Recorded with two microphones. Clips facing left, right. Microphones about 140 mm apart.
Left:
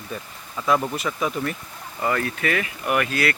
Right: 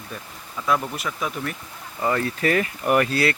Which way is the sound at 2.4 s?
40° right (ahead or behind).